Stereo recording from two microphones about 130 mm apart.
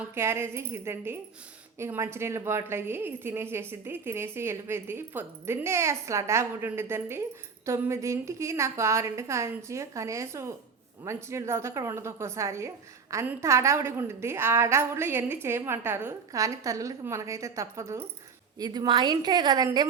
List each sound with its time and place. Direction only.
0.0 s a woman's voice: 20° right (ahead or behind)
18.6 s a woman's voice: 35° right (ahead or behind)